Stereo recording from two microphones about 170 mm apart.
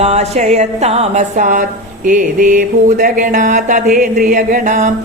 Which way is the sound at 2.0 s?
50° right (ahead or behind).